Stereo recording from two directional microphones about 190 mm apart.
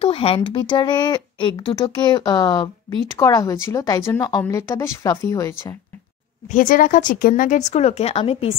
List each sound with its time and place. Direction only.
0.0 s a woman's voice: 30° left (ahead or behind)
6.5 s speech: 45° left (ahead or behind)